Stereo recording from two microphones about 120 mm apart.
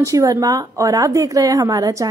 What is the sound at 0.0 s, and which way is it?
A woman's voice, 30° right (ahead or behind).